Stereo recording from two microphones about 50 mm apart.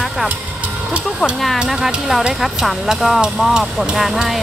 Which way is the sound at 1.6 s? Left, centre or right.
Centre.